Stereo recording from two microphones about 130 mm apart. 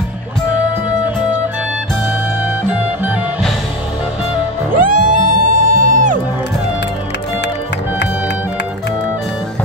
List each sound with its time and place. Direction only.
0.8 s music: 10° right (ahead or behind)
2.4 s music: 10° right (ahead or behind)
4.7 s music: 90° right